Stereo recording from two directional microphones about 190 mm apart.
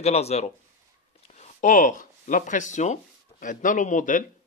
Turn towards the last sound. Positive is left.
turn(degrees=45)  # may be behind; listen again after turning